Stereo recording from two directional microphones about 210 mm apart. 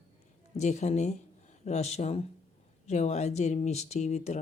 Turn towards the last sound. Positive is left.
turn(degrees=35)  # may be behind; listen again after turning